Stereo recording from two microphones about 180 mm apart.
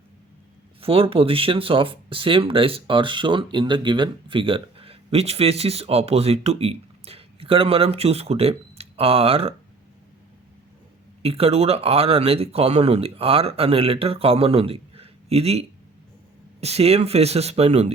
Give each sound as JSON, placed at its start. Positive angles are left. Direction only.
{"t": 0.8, "sound": "speech", "side_deg": -30}
{"t": 11.2, "sound": "speech", "side_deg": -35}